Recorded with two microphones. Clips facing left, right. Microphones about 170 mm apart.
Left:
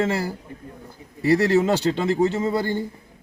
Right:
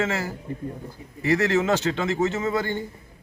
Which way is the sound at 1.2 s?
35° left (ahead or behind).